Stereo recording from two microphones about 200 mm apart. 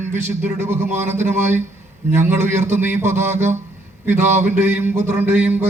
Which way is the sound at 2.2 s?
10° right (ahead or behind).